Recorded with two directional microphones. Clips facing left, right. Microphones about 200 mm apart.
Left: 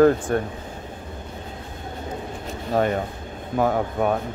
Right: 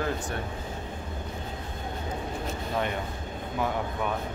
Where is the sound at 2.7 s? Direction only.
45° left (ahead or behind).